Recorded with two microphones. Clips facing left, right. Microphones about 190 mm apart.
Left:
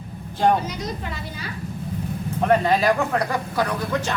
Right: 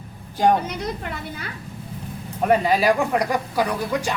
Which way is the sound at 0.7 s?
60° right (ahead or behind).